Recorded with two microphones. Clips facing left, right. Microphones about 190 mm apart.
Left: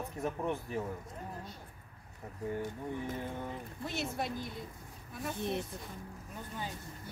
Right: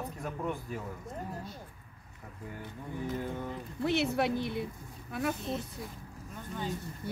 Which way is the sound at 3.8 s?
70° right (ahead or behind).